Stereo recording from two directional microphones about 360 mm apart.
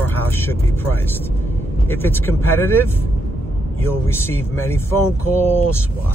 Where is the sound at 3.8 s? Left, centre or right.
Centre.